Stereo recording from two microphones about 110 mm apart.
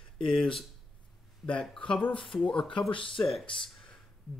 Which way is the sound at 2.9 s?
50° left (ahead or behind).